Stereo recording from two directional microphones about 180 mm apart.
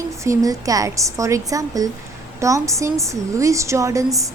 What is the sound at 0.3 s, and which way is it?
A woman's voice, 20° right (ahead or behind).